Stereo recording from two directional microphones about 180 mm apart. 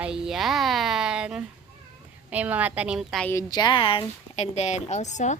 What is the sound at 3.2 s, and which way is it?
A woman's voice, 20° left (ahead or behind).